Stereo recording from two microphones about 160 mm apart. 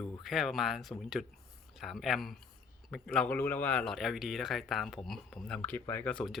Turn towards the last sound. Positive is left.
turn(degrees=5)  # may be behind; listen again after turning